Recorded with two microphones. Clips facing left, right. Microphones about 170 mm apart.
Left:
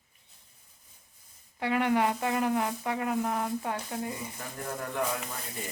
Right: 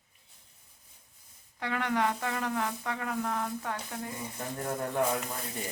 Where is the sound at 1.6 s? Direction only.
15° left (ahead or behind).